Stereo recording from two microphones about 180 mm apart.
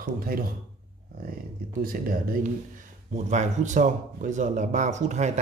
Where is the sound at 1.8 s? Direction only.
55° right (ahead or behind).